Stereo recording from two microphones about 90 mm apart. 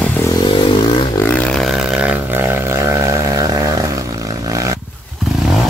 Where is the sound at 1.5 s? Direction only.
Centre (ahead or behind).